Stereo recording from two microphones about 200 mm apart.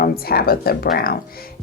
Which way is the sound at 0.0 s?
50° left (ahead or behind).